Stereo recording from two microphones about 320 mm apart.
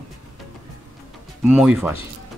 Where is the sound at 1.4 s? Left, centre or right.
Centre.